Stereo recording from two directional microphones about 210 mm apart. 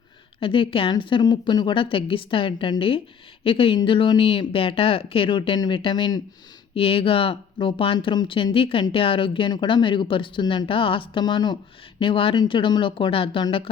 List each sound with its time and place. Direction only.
0.3 s speech: 25° left (ahead or behind)